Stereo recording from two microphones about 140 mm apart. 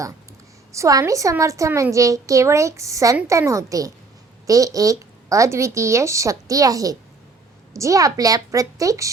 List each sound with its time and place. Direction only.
0.7 s a woman's voice: 25° right (ahead or behind)